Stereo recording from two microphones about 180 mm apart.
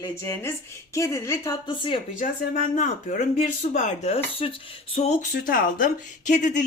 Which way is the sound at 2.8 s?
45° left (ahead or behind).